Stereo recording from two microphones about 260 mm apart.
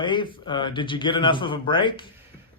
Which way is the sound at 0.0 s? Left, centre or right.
Centre.